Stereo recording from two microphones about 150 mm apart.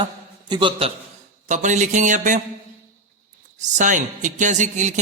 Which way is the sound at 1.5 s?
55° right (ahead or behind).